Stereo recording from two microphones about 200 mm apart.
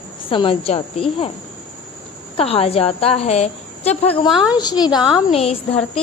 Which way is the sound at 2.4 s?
30° left (ahead or behind).